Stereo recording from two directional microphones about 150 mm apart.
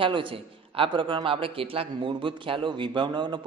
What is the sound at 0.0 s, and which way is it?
A man's voice, 35° right (ahead or behind).